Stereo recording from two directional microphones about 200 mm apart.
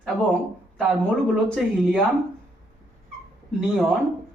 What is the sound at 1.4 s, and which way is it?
Speech, centre (ahead or behind).